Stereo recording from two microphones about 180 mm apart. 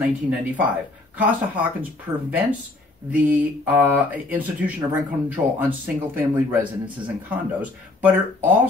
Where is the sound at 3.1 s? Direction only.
10° right (ahead or behind).